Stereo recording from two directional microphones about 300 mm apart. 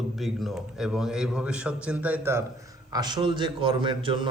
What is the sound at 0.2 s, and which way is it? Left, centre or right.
A man's voice, centre.